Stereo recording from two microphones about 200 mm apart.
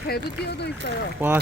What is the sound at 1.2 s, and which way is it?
Speech, 10° right (ahead or behind).